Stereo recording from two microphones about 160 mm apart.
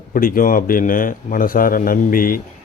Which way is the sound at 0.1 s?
60° left (ahead or behind).